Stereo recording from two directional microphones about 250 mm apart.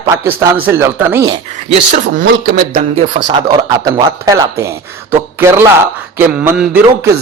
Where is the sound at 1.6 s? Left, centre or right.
Right.